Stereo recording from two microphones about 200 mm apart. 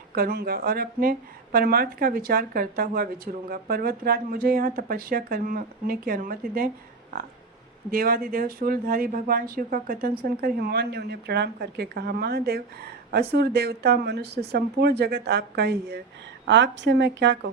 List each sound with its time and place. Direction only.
0.1 s speech: 50° right (ahead or behind)
7.9 s a woman's voice: 45° right (ahead or behind); by 17.5 s 60° right (ahead or behind)